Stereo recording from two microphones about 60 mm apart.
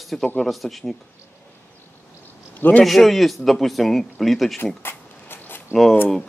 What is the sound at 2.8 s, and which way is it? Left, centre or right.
A man's voice, centre.